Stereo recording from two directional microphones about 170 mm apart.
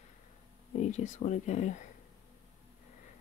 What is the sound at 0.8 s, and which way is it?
Speech, 45° left (ahead or behind).